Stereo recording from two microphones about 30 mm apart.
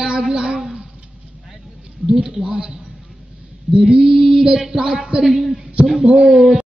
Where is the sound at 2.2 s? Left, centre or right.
Right.